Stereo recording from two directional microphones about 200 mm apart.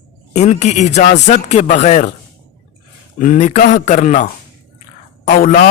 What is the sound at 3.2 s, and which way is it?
A man's voice, 40° left (ahead or behind).